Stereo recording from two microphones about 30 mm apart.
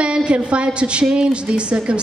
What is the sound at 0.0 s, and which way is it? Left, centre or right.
A woman's voice, right.